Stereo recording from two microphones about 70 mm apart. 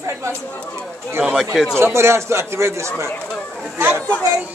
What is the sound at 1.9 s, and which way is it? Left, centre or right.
A man's voice, right.